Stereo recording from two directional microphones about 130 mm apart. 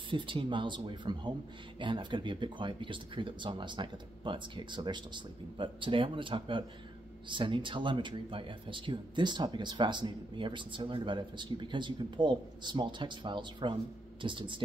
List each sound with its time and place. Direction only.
0.1 s speech: 40° right (ahead or behind)